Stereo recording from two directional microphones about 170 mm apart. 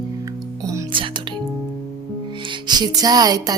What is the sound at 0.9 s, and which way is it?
Music, 30° right (ahead or behind).